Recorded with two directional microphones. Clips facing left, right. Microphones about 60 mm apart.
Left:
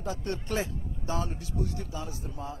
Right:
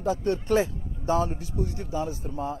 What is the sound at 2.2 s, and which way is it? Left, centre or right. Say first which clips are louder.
Speech: right 7 dB; right.